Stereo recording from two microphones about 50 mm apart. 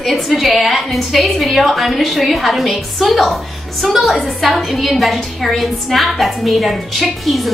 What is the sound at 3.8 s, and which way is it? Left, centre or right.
A woman's voice, centre.